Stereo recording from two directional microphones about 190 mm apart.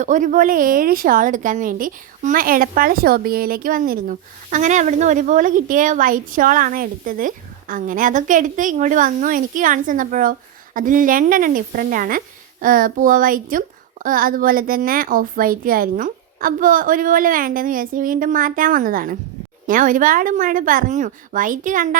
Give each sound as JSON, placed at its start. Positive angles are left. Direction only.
{"t": 0.0, "sound": "a woman's voice", "side_deg": -40}